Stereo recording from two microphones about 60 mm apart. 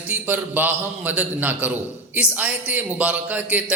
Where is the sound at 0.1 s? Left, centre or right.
Right.